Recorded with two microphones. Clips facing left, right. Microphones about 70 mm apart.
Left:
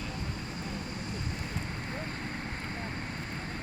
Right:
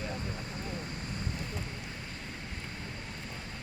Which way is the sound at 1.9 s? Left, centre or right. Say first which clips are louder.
Left 6 dB; left.